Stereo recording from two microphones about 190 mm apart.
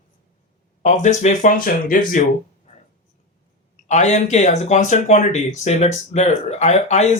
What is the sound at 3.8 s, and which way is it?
Speech, 40° left (ahead or behind).